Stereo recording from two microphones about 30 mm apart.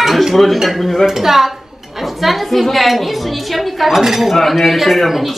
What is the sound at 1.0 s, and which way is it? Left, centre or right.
Speech, centre.